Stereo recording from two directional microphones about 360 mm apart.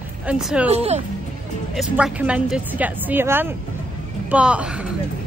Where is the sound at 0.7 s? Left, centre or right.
Centre.